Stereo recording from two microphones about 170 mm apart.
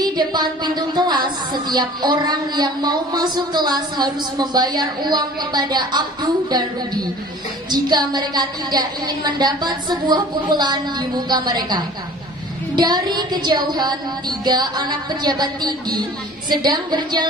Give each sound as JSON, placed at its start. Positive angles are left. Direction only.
{"t": 0.0, "sound": "a woman's voice", "side_deg": -25}